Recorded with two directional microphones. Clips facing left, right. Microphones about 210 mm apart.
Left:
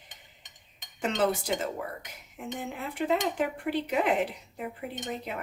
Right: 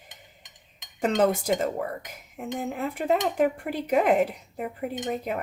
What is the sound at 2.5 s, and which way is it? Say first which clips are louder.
Speech: right 7 dB; 45° right (ahead or behind).